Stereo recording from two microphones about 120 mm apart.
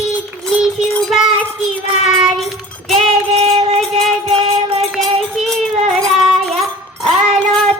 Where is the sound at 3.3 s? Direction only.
60° right (ahead or behind).